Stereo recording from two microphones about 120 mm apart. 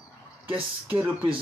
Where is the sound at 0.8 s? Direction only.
15° right (ahead or behind).